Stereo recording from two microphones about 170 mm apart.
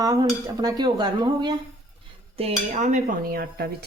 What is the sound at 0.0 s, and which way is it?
Dishes, 20° right (ahead or behind).